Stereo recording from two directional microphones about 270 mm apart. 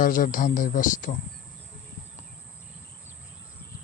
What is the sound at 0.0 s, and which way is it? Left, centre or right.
A man's voice, left.